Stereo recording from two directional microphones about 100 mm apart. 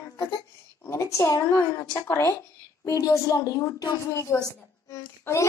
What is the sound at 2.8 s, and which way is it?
A child's voice, 35° left (ahead or behind).